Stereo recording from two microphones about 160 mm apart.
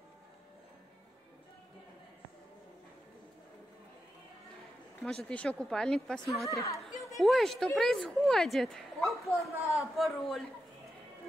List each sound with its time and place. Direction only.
5.0 s speech: 5° left (ahead or behind)
6.5 s speech: 20° left (ahead or behind)
7.2 s speech: centre (ahead or behind)